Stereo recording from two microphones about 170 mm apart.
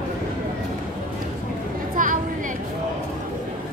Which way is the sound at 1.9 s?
50° right (ahead or behind).